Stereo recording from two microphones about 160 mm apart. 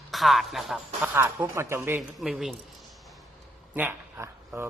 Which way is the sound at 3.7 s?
15° right (ahead or behind).